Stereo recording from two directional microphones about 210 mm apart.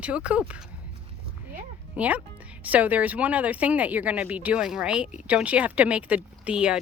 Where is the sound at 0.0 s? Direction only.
5° right (ahead or behind).